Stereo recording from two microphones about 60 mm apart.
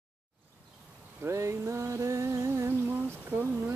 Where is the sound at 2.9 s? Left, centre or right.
Right.